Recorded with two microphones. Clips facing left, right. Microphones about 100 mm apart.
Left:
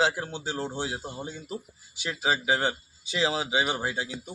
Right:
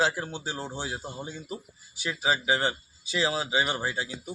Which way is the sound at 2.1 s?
Centre (ahead or behind).